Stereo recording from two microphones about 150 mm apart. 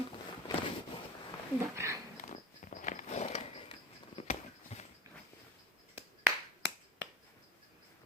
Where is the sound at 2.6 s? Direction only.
60° left (ahead or behind).